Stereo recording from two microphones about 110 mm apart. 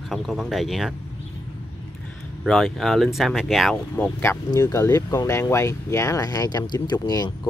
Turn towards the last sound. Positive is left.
turn(degrees=40)  # may be behind; listen again after turning